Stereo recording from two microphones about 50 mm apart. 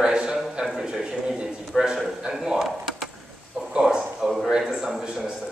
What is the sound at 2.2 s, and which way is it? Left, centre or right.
Speech, centre.